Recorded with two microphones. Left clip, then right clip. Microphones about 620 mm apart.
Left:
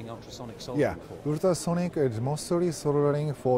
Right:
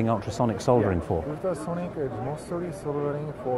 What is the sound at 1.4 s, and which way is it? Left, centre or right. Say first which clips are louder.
Speech: left 3 dB; left.